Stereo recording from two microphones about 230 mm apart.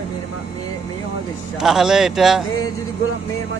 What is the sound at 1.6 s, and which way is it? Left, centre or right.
Speech, centre.